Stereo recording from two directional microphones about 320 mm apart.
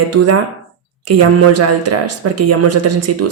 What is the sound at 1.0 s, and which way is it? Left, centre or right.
Speech, right.